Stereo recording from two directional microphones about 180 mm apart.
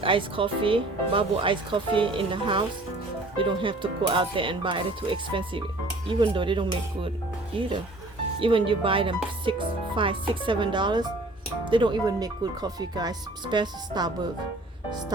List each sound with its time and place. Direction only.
0.0 s speech: 30° right (ahead or behind)
8.4 s speech: 30° right (ahead or behind)